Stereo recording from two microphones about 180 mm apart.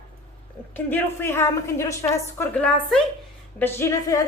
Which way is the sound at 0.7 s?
10° left (ahead or behind).